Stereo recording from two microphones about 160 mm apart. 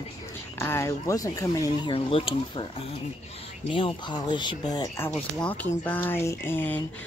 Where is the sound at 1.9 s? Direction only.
35° left (ahead or behind).